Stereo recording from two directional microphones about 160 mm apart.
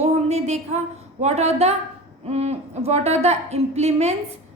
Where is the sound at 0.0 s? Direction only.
45° right (ahead or behind).